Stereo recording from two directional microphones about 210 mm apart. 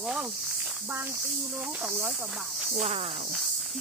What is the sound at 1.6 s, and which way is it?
Speech, 5° right (ahead or behind).